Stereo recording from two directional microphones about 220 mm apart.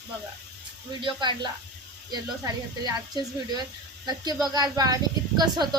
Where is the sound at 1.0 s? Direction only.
20° right (ahead or behind).